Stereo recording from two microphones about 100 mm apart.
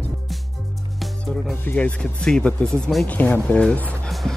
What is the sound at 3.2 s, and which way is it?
Speech, 15° left (ahead or behind).